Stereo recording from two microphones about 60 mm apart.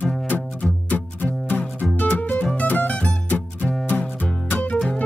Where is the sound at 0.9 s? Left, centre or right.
Left.